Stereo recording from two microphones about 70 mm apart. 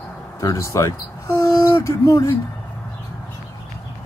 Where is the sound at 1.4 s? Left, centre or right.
Left.